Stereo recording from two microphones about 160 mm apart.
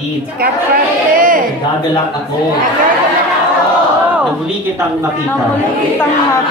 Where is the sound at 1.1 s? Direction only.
60° right (ahead or behind).